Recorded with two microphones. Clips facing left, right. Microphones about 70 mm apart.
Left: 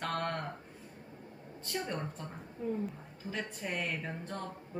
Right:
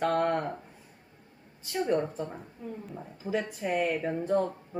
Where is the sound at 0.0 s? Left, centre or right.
Centre.